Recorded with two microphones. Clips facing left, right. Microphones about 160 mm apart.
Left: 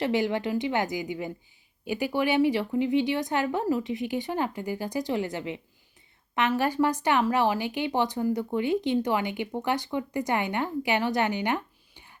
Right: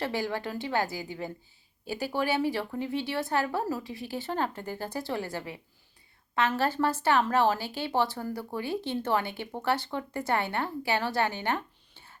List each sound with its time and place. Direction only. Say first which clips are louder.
0.0 s a woman's voice: left 5 dB; 20° left (ahead or behind)